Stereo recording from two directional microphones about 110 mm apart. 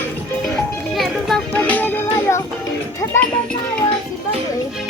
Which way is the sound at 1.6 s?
15° left (ahead or behind).